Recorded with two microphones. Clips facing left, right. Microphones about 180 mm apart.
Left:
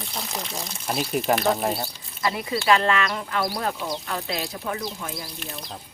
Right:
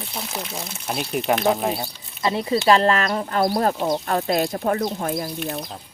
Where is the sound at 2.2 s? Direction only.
30° right (ahead or behind); by 5.3 s 50° right (ahead or behind).